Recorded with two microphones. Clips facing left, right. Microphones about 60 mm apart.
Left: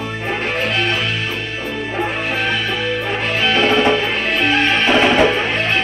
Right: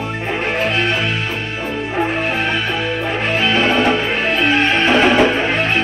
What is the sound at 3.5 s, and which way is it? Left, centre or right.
Music, right.